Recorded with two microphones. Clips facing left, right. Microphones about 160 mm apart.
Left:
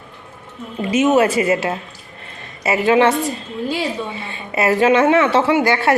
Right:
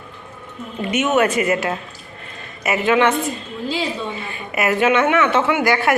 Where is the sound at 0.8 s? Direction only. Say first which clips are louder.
Left 3 dB; 30° left (ahead or behind).